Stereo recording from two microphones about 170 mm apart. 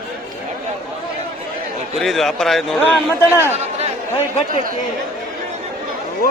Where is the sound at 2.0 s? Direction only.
Centre (ahead or behind).